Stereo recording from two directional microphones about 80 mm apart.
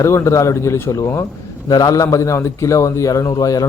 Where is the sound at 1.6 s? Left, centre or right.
Left.